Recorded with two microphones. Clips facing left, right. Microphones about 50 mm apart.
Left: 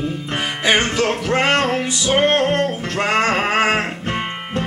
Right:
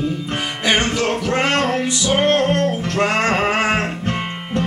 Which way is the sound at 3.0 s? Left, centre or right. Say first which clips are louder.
Even; centre.